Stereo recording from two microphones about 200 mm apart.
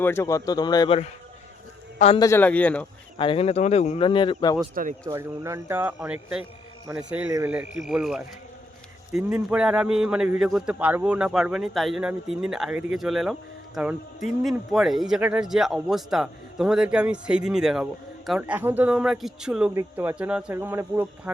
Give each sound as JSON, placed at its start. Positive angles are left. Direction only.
{"t": 0.0, "sound": "speech", "side_deg": 10}
{"t": 2.1, "sound": "a man's voice", "side_deg": 15}
{"t": 3.2, "sound": "speech", "side_deg": 25}
{"t": 4.7, "sound": "speech", "side_deg": -45}
{"t": 5.0, "sound": "speech", "side_deg": -15}
{"t": 14.4, "sound": "speech", "side_deg": 0}